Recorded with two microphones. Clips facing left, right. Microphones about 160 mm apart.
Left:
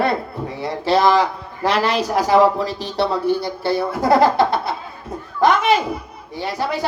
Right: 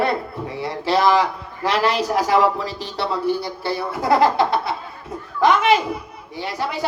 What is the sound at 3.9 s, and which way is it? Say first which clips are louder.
A woman's voice: left 1 dB; 45° left (ahead or behind).